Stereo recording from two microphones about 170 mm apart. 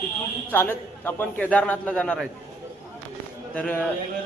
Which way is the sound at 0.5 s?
15° left (ahead or behind).